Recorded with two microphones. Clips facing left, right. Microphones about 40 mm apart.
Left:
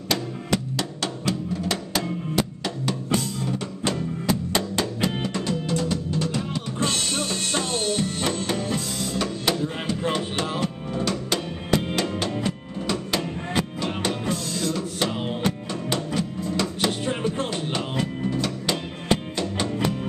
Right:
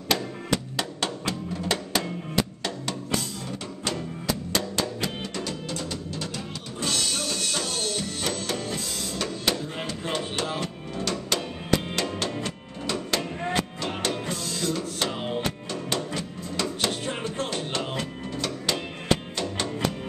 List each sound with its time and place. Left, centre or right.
0.1 s music: centre
4.3 s music: centre
5.5 s music: centre
6.8 s music: left
8.5 s music: centre